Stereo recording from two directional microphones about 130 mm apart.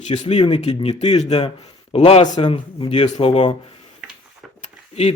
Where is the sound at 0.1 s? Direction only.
60° left (ahead or behind).